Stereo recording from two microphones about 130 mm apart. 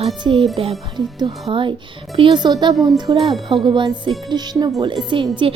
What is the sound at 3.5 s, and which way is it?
Speech, 40° right (ahead or behind).